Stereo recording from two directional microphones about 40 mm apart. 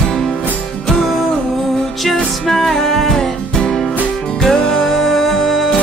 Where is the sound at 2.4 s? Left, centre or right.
Centre.